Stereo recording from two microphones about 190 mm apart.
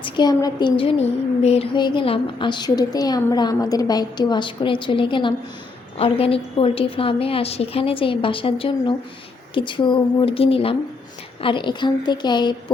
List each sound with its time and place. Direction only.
0.0 s a woman's voice: 20° left (ahead or behind)